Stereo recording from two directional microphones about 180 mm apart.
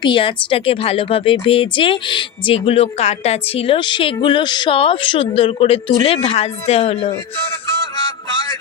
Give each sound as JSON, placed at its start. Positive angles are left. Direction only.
{"t": 0.0, "sound": "a woman's voice", "side_deg": 25}